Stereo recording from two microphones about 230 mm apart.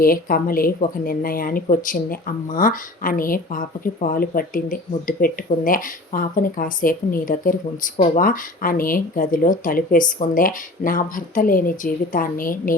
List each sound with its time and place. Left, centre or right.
0.0 s speech: left